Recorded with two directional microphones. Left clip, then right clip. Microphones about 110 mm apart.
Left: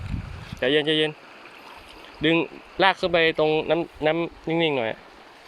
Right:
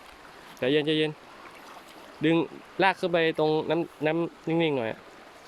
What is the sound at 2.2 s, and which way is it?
Speech, 20° right (ahead or behind).